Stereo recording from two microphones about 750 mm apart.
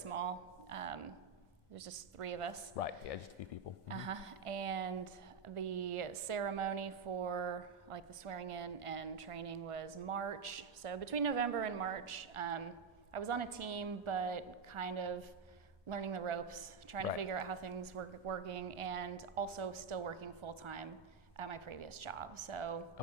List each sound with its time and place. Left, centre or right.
0.1 s a woman's voice: right
2.7 s a man's voice: left
3.8 s a woman's voice: right